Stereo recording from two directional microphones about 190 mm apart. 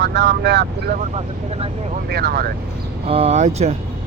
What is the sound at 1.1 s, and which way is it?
Speech, 30° right (ahead or behind).